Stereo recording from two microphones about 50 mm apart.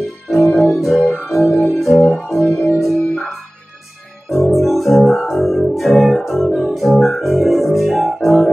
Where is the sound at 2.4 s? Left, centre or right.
Left.